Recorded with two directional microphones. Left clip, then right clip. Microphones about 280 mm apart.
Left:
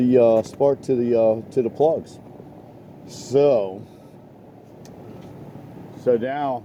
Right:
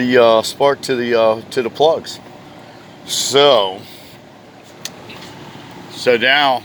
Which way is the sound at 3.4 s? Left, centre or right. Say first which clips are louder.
Right 7 dB; centre.